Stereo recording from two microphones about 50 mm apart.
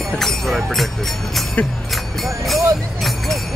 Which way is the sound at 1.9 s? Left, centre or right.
Centre.